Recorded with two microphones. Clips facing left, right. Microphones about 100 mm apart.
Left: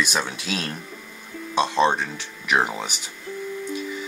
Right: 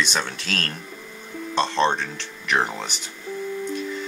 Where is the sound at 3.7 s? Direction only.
5° left (ahead or behind).